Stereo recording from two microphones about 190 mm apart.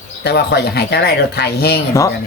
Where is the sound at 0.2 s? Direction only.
60° left (ahead or behind).